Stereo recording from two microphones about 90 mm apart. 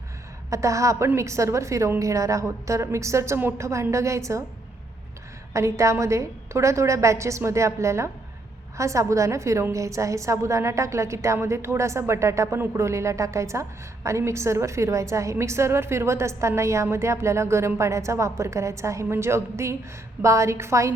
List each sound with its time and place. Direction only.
0.5 s a woman's voice: 35° right (ahead or behind)
5.5 s a woman's voice: 35° right (ahead or behind)